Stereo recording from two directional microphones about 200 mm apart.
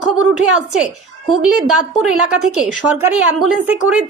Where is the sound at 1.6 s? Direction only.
5° right (ahead or behind).